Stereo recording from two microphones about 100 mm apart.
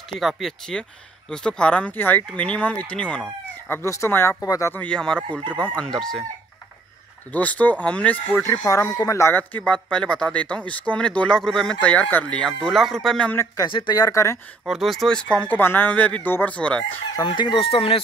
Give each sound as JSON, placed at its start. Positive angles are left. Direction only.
{"t": 0.1, "sound": "speech", "side_deg": 0}
{"t": 3.6, "sound": "speech", "side_deg": 25}
{"t": 4.7, "sound": "speech", "side_deg": 10}
{"t": 7.3, "sound": "speech", "side_deg": 15}
{"t": 8.5, "sound": "speech", "side_deg": 30}
{"t": 9.4, "sound": "speech", "side_deg": 15}
{"t": 13.7, "sound": "speech", "side_deg": 55}
{"t": 13.9, "sound": "speech", "side_deg": 35}
{"t": 14.7, "sound": "speech", "side_deg": 0}
{"t": 17.2, "sound": "speech", "side_deg": 50}